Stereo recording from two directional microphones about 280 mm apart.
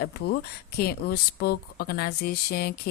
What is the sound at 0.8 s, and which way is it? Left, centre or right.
Speech, left.